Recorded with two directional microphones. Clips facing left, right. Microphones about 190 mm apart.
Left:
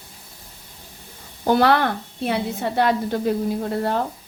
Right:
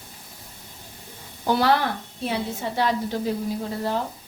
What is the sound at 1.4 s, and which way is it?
A woman's voice, 55° left (ahead or behind).